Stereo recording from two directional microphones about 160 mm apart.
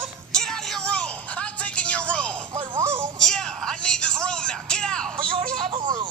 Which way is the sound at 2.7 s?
15° right (ahead or behind).